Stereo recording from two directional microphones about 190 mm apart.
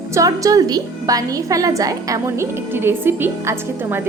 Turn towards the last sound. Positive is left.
turn(degrees=-10)  # may be behind; listen again after turning